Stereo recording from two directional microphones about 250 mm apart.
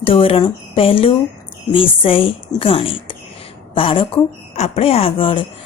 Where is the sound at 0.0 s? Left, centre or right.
Left.